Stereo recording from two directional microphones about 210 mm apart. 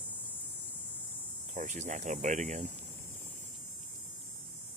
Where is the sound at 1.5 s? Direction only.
35° right (ahead or behind).